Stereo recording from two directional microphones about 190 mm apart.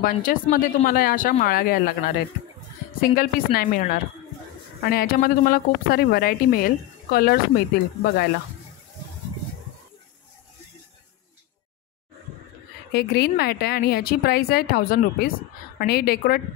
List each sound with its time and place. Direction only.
0.0 s speech: 45° left (ahead or behind)
12.9 s speech: 60° left (ahead or behind)